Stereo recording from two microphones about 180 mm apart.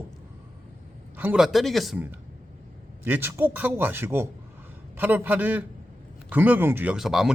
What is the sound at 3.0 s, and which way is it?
A man's voice, 10° right (ahead or behind).